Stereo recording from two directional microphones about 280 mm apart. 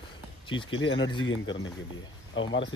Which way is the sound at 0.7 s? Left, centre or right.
Left.